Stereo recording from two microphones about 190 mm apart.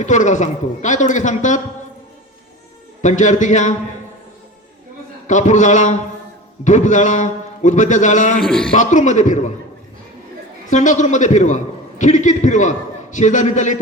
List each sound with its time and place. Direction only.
0.0 s a man's voice: 40° left (ahead or behind)
3.0 s a man's voice: 40° left (ahead or behind)
5.3 s a man's voice: 40° left (ahead or behind)
8.4 s a man's voice: 5° left (ahead or behind)
8.7 s a man's voice: 40° left (ahead or behind)
10.7 s a man's voice: 40° left (ahead or behind)